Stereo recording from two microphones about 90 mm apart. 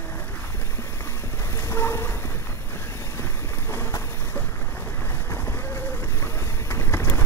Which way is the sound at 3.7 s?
30° left (ahead or behind).